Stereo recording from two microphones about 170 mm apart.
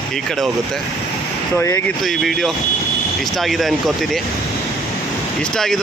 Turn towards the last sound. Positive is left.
turn(degrees=0)  # may be behind; listen again after turning